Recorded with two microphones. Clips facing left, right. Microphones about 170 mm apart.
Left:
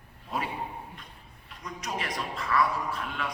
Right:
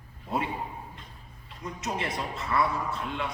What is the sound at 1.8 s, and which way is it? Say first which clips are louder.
A man's voice: right 2 dB; 25° right (ahead or behind).